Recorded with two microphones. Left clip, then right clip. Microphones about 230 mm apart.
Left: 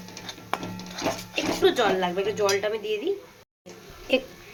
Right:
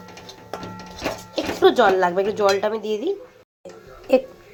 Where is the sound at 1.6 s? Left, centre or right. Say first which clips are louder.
Right 7 dB; centre.